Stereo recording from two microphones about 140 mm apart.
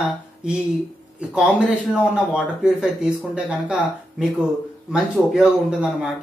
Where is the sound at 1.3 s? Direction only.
5° right (ahead or behind).